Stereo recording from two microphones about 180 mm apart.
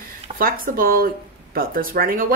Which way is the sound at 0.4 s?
50° right (ahead or behind).